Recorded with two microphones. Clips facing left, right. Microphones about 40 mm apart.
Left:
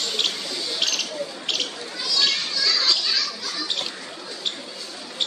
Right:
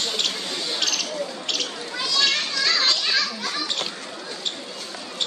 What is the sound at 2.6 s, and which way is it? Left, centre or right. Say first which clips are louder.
Children playing: even; right.